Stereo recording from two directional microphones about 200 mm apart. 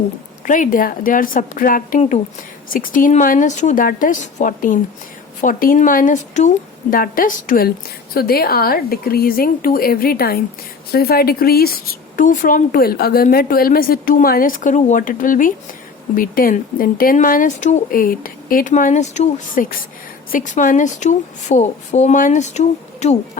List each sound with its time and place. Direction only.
0.4 s a woman's voice: 40° left (ahead or behind)